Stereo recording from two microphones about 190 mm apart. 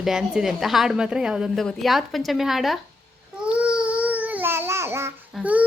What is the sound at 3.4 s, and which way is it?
Babbling, 5° right (ahead or behind).